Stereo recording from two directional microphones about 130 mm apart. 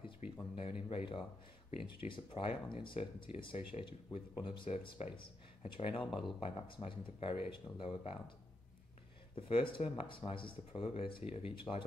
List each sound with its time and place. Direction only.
0.0 s speech: 45° left (ahead or behind)
4.6 s speech: 55° left (ahead or behind)
9.3 s speech: 45° left (ahead or behind)
11.7 s speech: 25° left (ahead or behind)